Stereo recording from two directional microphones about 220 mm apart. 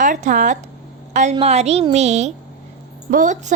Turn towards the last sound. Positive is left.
turn(degrees=-35)  # may be behind; listen again after turning